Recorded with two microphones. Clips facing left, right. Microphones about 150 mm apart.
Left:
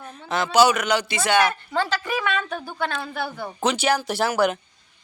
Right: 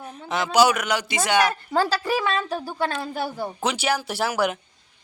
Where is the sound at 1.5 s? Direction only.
40° right (ahead or behind).